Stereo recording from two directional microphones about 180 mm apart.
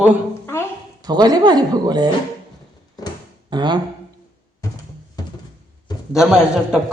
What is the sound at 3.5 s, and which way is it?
Speech, 25° right (ahead or behind).